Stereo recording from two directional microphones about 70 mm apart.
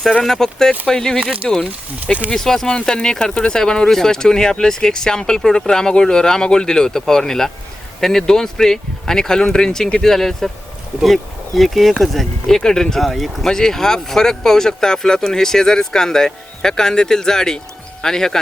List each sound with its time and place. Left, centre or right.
0.0 s speech: centre
1.2 s speech: centre
2.3 s speech: centre